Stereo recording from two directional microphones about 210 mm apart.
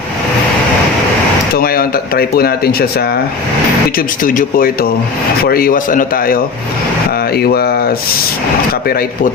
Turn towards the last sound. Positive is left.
turn(degrees=45)  # may be behind; listen again after turning